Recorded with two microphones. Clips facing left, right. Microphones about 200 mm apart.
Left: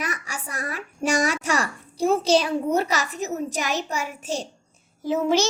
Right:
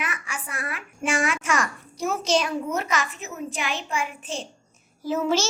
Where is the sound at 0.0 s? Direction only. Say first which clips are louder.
Left 2 dB; 40° left (ahead or behind).